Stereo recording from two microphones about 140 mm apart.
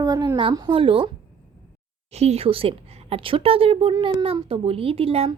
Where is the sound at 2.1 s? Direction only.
50° right (ahead or behind); by 4.4 s 30° right (ahead or behind).